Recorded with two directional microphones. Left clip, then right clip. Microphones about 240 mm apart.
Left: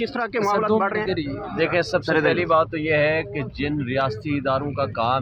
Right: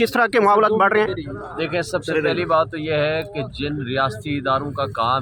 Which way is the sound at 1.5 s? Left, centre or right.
Centre.